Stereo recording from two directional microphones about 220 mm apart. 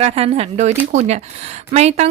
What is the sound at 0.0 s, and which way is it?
A woman's voice, 25° right (ahead or behind).